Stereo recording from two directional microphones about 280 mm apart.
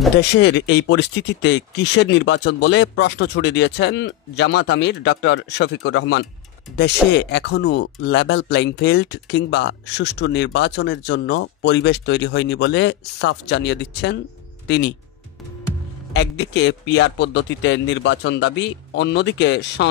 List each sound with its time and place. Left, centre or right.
0.4 s speech: left
16.1 s speech: left